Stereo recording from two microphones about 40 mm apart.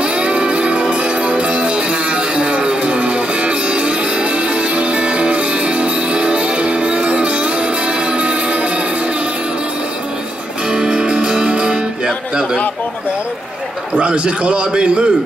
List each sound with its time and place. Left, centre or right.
0.0 s music: right
10.7 s music: right
13.9 s a man's voice: right